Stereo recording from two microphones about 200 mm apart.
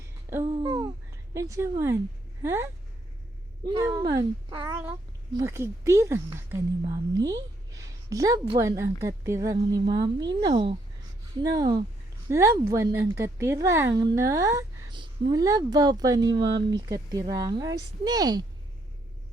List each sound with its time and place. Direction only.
0.4 s speech: 25° right (ahead or behind)
3.7 s speech: 15° right (ahead or behind)